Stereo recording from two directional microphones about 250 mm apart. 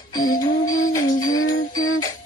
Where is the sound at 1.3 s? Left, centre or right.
Left.